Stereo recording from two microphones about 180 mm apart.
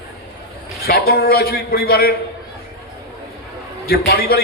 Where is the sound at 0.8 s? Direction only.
55° left (ahead or behind).